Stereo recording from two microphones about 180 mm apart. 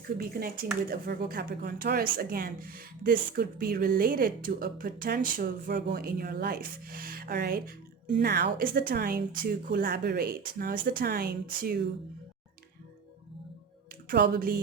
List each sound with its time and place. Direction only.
0.2 s speech: 55° right (ahead or behind)
14.1 s speech: 55° right (ahead or behind)